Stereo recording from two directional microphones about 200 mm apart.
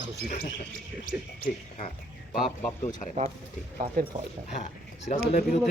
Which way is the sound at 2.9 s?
40° left (ahead or behind).